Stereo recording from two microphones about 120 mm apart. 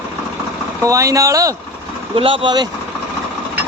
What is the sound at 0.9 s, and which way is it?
Speech, 25° right (ahead or behind).